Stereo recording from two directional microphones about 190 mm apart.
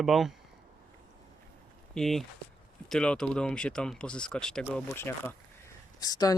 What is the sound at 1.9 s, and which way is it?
Speech, centre (ahead or behind).